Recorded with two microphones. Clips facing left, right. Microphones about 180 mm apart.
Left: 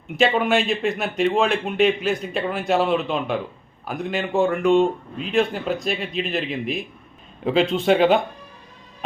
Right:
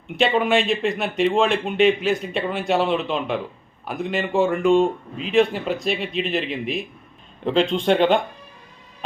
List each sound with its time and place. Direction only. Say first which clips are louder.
0.2 s speech: even; centre (ahead or behind)